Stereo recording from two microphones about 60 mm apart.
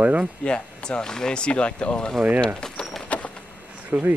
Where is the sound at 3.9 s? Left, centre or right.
Right.